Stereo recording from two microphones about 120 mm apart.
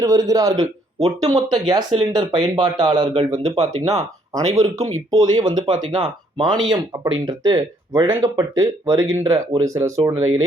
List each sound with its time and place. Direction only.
0.0 s speech: 30° right (ahead or behind)
8.0 s speech: 25° right (ahead or behind)